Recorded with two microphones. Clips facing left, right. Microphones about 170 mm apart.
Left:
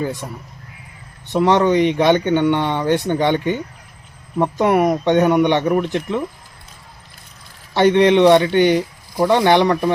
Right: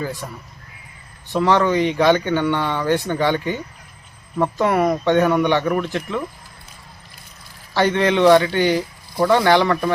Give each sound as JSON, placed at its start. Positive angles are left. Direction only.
{"t": 0.0, "sound": "speech", "side_deg": 20}
{"t": 1.3, "sound": "speech", "side_deg": 20}
{"t": 7.7, "sound": "speech", "side_deg": 20}